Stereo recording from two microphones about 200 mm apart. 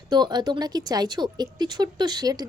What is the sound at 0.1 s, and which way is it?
Speech, 20° right (ahead or behind).